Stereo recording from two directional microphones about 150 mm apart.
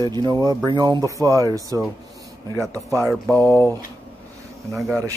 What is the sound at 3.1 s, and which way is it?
Mantra, 10° left (ahead or behind).